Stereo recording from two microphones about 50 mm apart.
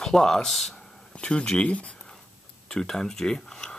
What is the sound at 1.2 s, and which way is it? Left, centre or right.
Speech, centre.